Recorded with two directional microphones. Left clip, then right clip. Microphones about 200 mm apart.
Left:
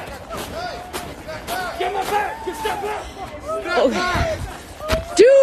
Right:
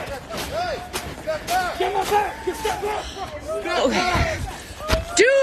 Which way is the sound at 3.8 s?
15° left (ahead or behind).